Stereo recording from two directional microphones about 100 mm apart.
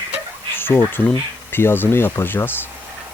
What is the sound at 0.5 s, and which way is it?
Insect, 20° left (ahead or behind).